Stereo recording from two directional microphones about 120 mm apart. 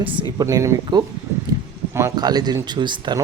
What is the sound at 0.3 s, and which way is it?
Speech, 30° right (ahead or behind).